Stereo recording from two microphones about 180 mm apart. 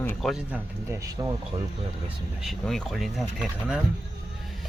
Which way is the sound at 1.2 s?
20° right (ahead or behind).